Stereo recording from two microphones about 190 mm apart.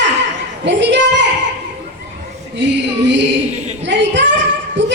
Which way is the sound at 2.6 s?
70° right (ahead or behind).